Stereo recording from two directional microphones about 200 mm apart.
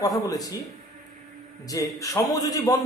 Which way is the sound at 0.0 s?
20° left (ahead or behind).